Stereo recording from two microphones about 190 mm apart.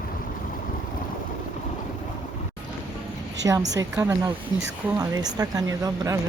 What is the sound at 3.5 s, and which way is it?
A woman's voice, 15° right (ahead or behind).